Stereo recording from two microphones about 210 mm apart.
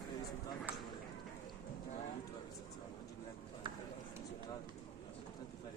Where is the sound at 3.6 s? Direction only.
20° right (ahead or behind).